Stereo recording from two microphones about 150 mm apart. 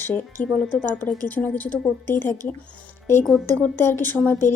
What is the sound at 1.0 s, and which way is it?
Speech, 10° left (ahead or behind).